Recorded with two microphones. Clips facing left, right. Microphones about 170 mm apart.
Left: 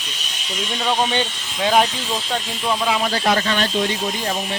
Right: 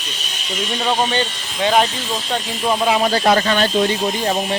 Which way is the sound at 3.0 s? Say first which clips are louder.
Right 4 dB; 45° right (ahead or behind).